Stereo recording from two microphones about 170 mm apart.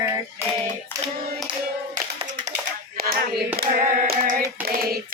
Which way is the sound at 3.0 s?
60° right (ahead or behind).